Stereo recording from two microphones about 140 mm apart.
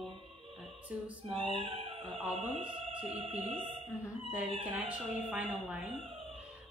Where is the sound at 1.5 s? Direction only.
40° right (ahead or behind).